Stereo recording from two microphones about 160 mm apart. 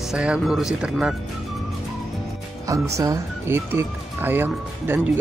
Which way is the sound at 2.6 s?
20° right (ahead or behind).